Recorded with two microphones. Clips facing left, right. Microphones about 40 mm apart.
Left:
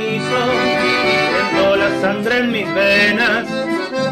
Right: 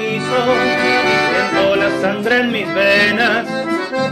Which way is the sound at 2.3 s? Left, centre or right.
Centre.